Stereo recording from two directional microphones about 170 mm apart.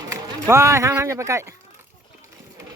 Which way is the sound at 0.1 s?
15° right (ahead or behind).